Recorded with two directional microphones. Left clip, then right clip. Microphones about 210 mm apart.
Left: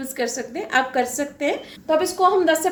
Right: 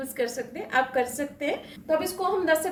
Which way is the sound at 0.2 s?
40° left (ahead or behind).